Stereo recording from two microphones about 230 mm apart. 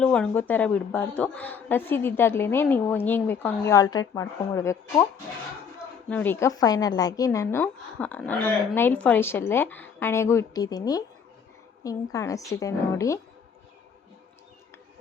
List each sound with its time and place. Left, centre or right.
0.0 s speech: centre
6.1 s speech: centre